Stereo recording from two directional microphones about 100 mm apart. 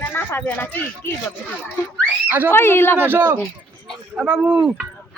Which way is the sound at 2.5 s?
25° left (ahead or behind).